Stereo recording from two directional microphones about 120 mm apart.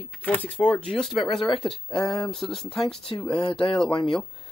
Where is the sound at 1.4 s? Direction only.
40° left (ahead or behind).